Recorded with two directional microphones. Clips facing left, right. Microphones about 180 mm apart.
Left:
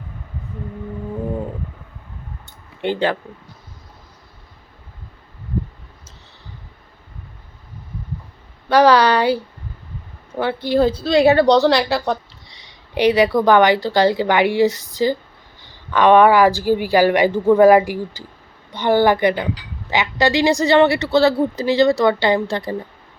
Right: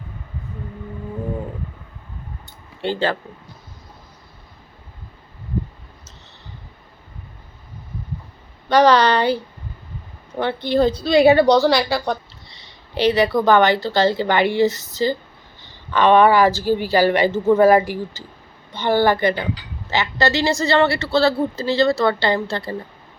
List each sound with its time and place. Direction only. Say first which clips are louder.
2.8 s speech: left 2 dB; 15° left (ahead or behind)
8.7 s a woman's voice: left 1 dB; 10° left (ahead or behind)
12.5 s speech: right 1 dB; 15° left (ahead or behind)